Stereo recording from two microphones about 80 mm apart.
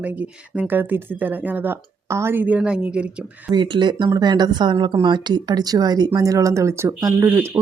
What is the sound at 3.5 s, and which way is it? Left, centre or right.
Speech, right.